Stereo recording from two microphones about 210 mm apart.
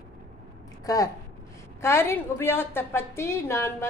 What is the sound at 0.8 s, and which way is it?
A woman's voice, 15° left (ahead or behind).